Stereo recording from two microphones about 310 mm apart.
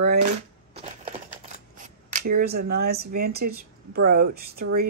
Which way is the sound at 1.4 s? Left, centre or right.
Right.